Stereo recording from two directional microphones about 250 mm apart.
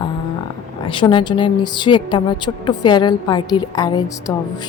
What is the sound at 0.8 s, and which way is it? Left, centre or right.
A woman's voice, centre.